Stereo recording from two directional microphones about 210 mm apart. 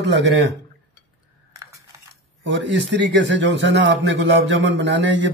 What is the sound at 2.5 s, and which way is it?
A man's voice, 55° right (ahead or behind).